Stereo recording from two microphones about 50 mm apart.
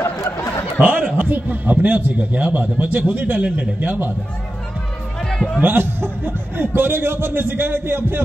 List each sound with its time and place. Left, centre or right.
0.0 s a sound: left
0.7 s a man's voice: right
5.2 s music: centre
5.6 s a man's voice: right